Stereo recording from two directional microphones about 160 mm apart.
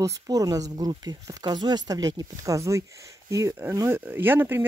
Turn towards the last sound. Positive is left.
turn(degrees=-15)  # may be behind; listen again after turning